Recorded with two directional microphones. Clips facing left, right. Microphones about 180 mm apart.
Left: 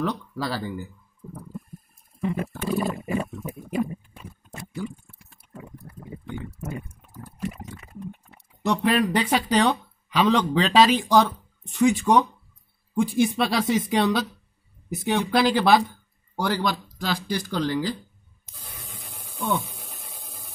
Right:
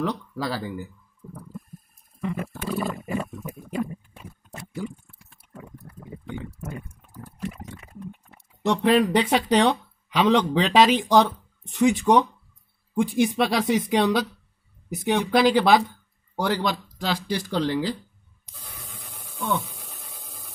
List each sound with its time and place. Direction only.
0.0 s speech: 15° right (ahead or behind)
1.2 s a sound: 5° left (ahead or behind)
2.2 s wild animals: 25° left (ahead or behind)
3.4 s pig: 15° left (ahead or behind)
5.5 s liquid: 10° left (ahead or behind)
7.3 s pig: 5° left (ahead or behind)
8.6 s speech: 25° right (ahead or behind)
19.3 s a sound: 15° left (ahead or behind)